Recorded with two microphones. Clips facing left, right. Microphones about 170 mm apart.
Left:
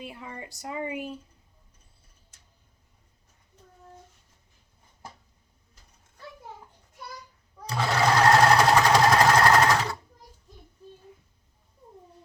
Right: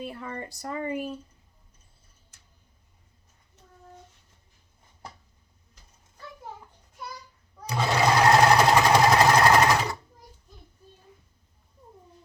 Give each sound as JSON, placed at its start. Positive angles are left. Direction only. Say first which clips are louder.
{"t": 0.2, "sound": "speech", "louder": "right 4 dB", "side_deg": -50}
{"t": 0.6, "sound": "speech", "louder": "right 1 dB", "side_deg": 10}
{"t": 7.7, "sound": "sewing machine", "louder": "right 1 dB", "side_deg": -15}